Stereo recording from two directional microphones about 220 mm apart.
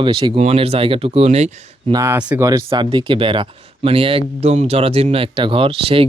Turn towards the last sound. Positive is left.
turn(degrees=-25)  # may be behind; listen again after turning